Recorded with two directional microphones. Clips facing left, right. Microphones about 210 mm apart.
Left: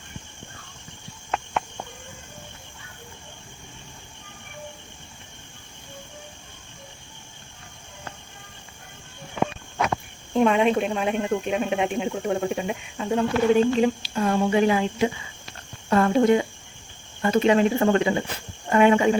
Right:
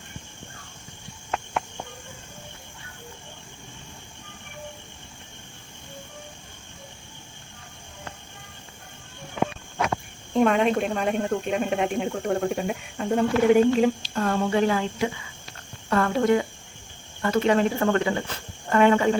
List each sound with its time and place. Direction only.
10.3 s speech: centre (ahead or behind)